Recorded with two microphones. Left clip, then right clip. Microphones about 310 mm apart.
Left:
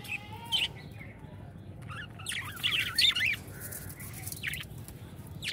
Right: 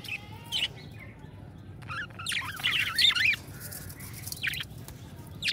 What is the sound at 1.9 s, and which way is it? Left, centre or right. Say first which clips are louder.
Bird: right 6 dB; right.